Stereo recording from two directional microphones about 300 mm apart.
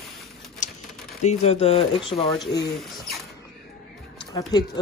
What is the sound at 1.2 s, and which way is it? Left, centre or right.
Speech, left.